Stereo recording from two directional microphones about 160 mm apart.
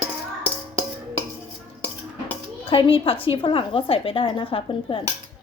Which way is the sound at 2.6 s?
35° left (ahead or behind).